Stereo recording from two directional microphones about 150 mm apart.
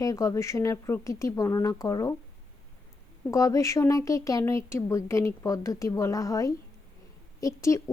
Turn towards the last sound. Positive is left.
turn(degrees=20)  # may be behind; listen again after turning